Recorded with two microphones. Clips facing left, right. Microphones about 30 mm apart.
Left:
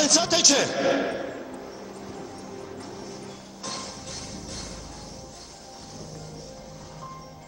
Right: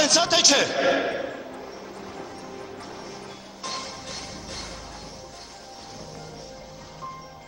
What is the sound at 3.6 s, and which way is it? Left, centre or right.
Music, centre.